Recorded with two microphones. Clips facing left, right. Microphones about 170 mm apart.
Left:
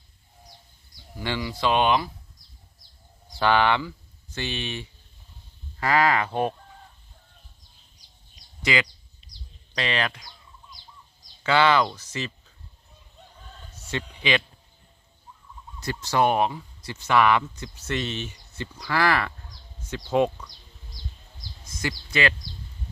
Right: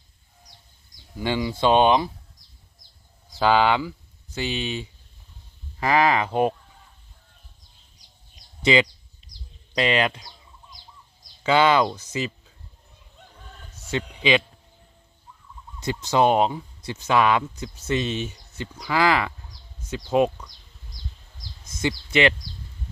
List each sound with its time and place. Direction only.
1.2 s speech: 15° right (ahead or behind)
3.3 s speech: 15° right (ahead or behind)
5.8 s speech: 15° right (ahead or behind)
8.6 s speech: 25° right (ahead or behind)
11.4 s speech: 15° right (ahead or behind)
13.9 s speech: 15° right (ahead or behind)
15.8 s speech: 20° right (ahead or behind)
21.7 s speech: 25° right (ahead or behind)